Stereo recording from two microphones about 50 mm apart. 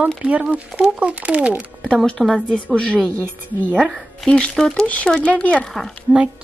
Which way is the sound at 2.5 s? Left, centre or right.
Left.